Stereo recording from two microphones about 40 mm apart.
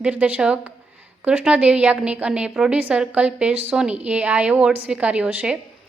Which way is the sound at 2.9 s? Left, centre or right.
Centre.